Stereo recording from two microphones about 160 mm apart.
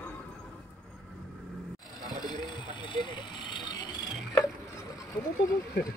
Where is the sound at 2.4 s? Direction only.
30° left (ahead or behind).